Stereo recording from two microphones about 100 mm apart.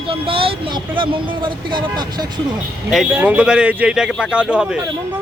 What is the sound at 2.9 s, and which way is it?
A man's voice, 5° right (ahead or behind).